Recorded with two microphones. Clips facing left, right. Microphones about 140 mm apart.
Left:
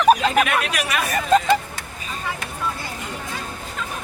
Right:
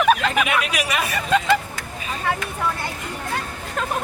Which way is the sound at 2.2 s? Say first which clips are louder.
Right 6 dB; 60° right (ahead or behind).